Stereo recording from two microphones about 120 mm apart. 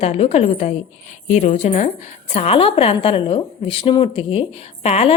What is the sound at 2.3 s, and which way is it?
A woman's voice, 55° left (ahead or behind).